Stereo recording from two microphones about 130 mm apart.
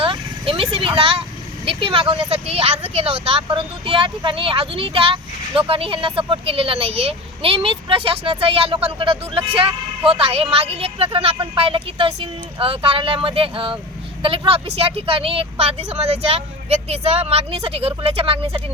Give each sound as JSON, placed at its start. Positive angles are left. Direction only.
{"t": 0.0, "sound": "vehicle", "side_deg": -45}
{"t": 1.6, "sound": "speech", "side_deg": -45}